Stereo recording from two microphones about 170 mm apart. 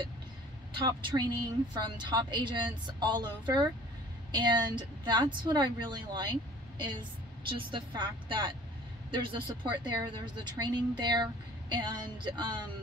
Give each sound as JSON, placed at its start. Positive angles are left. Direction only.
{"t": 0.7, "sound": "speech", "side_deg": -25}